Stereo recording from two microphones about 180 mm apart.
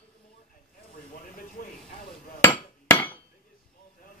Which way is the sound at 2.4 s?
10° left (ahead or behind).